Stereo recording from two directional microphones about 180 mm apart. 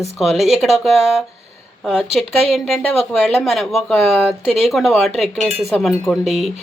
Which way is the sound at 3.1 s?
5° left (ahead or behind).